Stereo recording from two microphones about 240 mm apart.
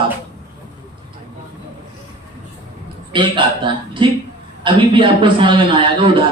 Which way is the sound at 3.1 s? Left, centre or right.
Centre.